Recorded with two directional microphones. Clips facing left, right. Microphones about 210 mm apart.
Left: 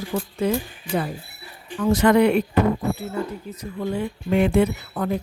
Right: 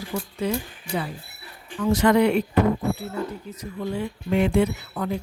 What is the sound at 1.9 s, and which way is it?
Speech, 55° left (ahead or behind).